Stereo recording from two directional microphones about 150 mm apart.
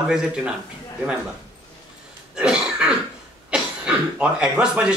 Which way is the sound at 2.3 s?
5° right (ahead or behind).